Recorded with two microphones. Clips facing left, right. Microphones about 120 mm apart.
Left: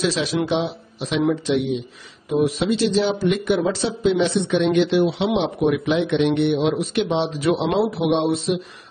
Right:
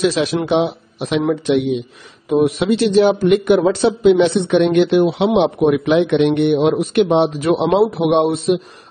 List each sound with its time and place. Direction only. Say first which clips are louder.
0.0 s a man's voice: right 5 dB; 55° right (ahead or behind)